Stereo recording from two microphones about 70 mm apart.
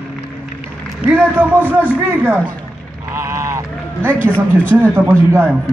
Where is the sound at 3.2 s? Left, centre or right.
Right.